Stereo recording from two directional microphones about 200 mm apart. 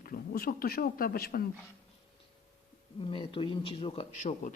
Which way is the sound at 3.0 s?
25° left (ahead or behind).